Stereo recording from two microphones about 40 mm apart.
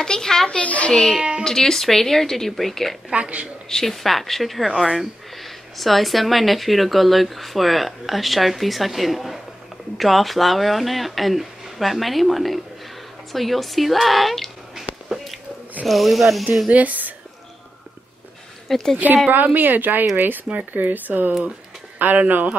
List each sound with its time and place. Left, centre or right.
0.0 s speech: centre
0.7 s a child's voice: left
1.4 s speech: centre
3.1 s speech: right
3.6 s speech: centre
15.0 s a sound: centre
15.8 s speech: centre
16.7 s speech: right
18.7 s speech: centre
19.4 s speech: right